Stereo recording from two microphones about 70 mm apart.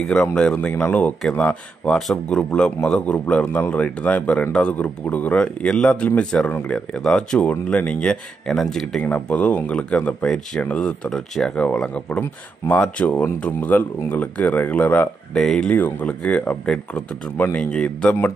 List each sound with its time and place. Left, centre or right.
0.0 s a man's voice: centre
6.9 s a man's voice: centre
9.0 s a man's voice: left
11.5 s a man's voice: centre
15.3 s a man's voice: centre
15.7 s a man's voice: left